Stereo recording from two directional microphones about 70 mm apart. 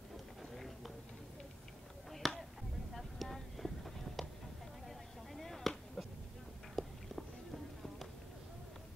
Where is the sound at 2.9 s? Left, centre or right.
Centre.